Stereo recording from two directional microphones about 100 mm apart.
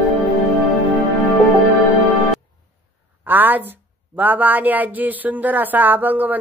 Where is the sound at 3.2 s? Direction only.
20° right (ahead or behind).